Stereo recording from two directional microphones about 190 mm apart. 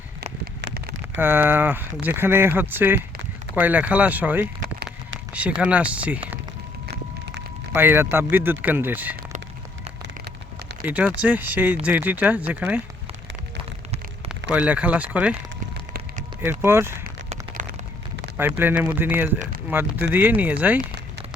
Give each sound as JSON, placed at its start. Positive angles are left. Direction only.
{"t": 0.6, "sound": "a sound", "side_deg": -60}
{"t": 1.2, "sound": "speech", "side_deg": -10}
{"t": 7.7, "sound": "speech", "side_deg": -10}
{"t": 10.0, "sound": "a sound", "side_deg": -65}
{"t": 10.8, "sound": "speech", "side_deg": -10}
{"t": 14.5, "sound": "speech", "side_deg": -5}
{"t": 15.7, "sound": "music", "side_deg": -50}
{"t": 16.6, "sound": "speech", "side_deg": -15}
{"t": 17.6, "sound": "a sound", "side_deg": -40}
{"t": 18.3, "sound": "speech", "side_deg": -10}